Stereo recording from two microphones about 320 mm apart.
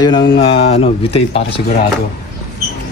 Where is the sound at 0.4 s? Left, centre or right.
Centre.